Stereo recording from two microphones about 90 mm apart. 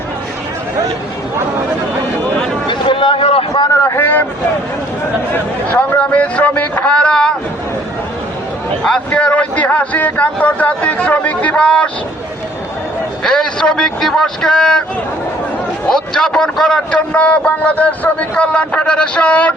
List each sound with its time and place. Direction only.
2.6 s a sound: 70° left (ahead or behind)
3.5 s a sound: 40° left (ahead or behind)
3.9 s vehicle: 20° left (ahead or behind)
5.7 s speech: 20° left (ahead or behind)
9.0 s a man's voice: 15° left (ahead or behind)
13.2 s a man's voice: 5° left (ahead or behind)
15.9 s a man's voice: 5° left (ahead or behind)